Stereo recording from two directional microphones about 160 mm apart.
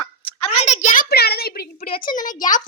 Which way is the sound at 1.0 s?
80° left.